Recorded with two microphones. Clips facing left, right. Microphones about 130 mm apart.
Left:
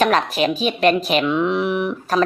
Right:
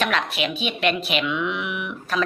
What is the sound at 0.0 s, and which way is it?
Speech, 40° left (ahead or behind).